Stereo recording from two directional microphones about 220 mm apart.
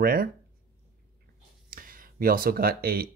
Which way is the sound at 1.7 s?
40° right (ahead or behind).